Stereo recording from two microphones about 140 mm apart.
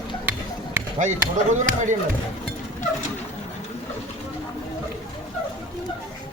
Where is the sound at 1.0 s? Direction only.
60° right (ahead or behind).